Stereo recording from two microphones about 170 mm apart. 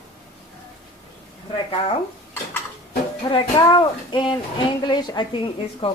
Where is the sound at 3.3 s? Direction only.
30° left (ahead or behind).